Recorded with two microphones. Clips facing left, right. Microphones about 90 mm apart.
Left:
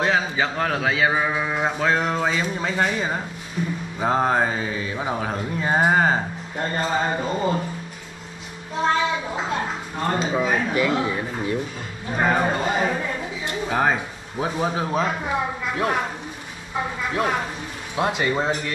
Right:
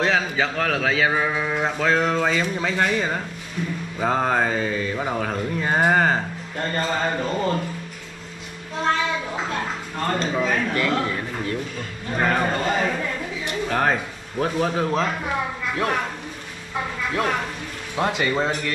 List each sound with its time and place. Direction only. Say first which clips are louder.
0.0 s speech: even; 5° left (ahead or behind)
9.5 s a man's voice: left 1 dB; 10° left (ahead or behind)
17.1 s speech: even; 10° left (ahead or behind)